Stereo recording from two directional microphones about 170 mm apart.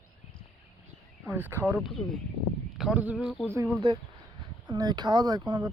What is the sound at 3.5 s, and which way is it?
Speech, 15° right (ahead or behind).